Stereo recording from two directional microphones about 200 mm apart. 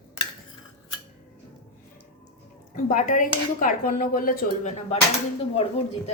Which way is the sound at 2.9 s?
40° left (ahead or behind).